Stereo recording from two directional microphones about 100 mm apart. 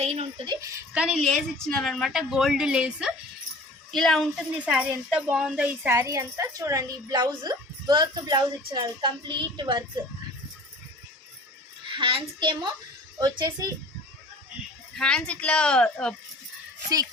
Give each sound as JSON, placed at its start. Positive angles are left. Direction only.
{"t": 0.0, "sound": "a sound", "side_deg": -90}
{"t": 0.9, "sound": "speech", "side_deg": -10}
{"t": 1.2, "sound": "speech", "side_deg": 5}
{"t": 3.9, "sound": "speech", "side_deg": 5}
{"t": 4.5, "sound": "speech", "side_deg": -15}
{"t": 5.8, "sound": "a woman's voice", "side_deg": -25}
{"t": 11.9, "sound": "a sound", "side_deg": -60}
{"t": 12.4, "sound": "a woman's voice", "side_deg": -50}
{"t": 14.9, "sound": "speech", "side_deg": 10}